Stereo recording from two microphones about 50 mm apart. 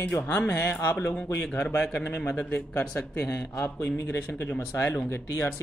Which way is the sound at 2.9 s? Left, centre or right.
Left.